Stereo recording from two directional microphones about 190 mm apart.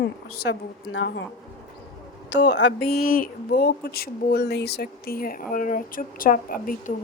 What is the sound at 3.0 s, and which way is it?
Speech, 50° left (ahead or behind).